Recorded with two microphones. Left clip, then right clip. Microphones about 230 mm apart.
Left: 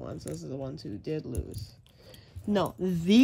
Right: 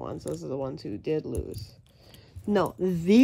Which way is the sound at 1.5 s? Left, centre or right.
Centre.